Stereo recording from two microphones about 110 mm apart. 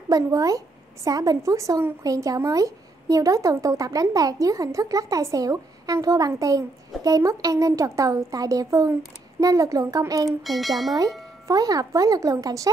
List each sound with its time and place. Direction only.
0.1 s speech: 30° right (ahead or behind)
10.4 s speech: centre (ahead or behind)
11.4 s speech: 35° right (ahead or behind)